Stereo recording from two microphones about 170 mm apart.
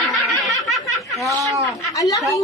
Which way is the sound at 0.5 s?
Centre (ahead or behind).